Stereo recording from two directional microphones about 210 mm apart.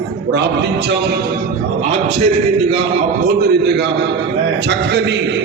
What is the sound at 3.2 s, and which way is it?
A man's voice, 50° right (ahead or behind).